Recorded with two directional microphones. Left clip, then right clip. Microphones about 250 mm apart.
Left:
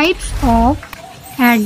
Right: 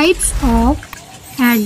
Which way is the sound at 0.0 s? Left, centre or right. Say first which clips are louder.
Right 1 dB; centre.